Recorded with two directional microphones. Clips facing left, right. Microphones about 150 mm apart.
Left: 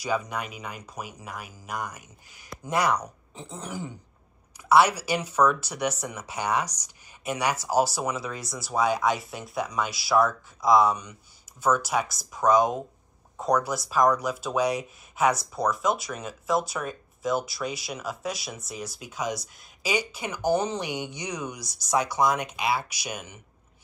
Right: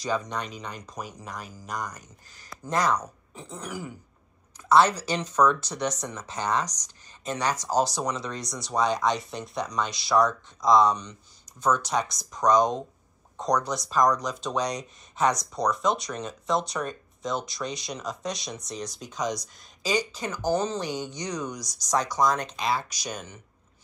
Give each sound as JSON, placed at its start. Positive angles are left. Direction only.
{"t": 0.0, "sound": "speech", "side_deg": 10}
{"t": 3.6, "sound": "throat clearing", "side_deg": 25}
{"t": 4.6, "sound": "speech", "side_deg": 10}